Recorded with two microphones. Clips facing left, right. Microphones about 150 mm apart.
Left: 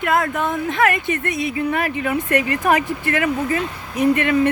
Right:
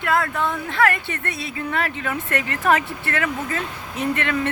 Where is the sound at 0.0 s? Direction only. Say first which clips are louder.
Left 2 dB; 20° left (ahead or behind).